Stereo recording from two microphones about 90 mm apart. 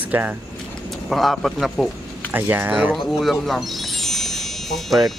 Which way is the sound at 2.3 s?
20° right (ahead or behind).